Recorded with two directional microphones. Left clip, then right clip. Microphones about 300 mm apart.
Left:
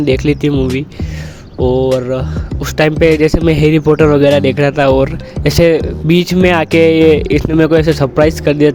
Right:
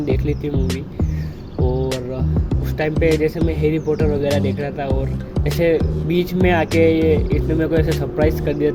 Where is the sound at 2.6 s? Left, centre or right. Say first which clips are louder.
Left 9 dB; left.